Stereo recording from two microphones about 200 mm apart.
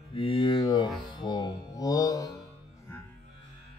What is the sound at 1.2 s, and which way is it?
Mantra, 20° left (ahead or behind).